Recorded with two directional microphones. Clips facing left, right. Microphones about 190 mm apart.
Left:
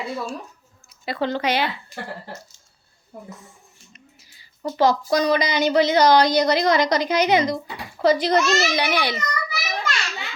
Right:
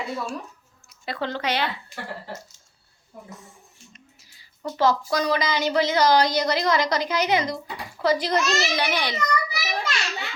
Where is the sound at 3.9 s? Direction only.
Centre (ahead or behind).